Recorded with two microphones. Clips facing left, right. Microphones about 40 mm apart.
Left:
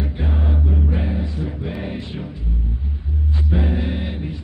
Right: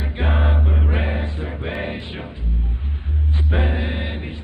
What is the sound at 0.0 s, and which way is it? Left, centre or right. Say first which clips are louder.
Choir: right 2 dB; right.